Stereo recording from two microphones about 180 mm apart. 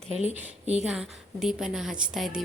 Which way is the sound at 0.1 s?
35° left (ahead or behind).